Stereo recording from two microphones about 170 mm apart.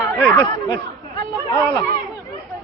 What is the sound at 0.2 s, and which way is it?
Speech, 15° left (ahead or behind).